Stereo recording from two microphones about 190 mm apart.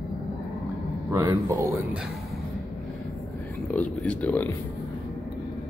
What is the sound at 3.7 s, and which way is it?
Speech, 10° left (ahead or behind).